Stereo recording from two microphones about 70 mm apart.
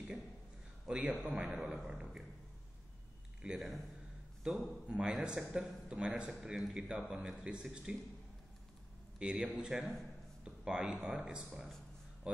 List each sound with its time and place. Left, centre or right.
0.8 s a man's voice: centre
3.4 s a man's voice: centre
9.2 s a man's voice: centre